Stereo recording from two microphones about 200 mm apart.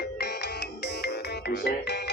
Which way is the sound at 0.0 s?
55° left (ahead or behind).